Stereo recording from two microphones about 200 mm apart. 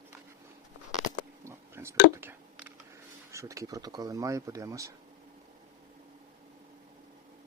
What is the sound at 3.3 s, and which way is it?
Speech, 15° right (ahead or behind).